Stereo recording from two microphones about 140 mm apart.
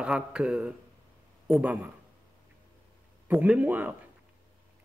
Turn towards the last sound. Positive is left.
turn(degrees=-10)  # may be behind; listen again after turning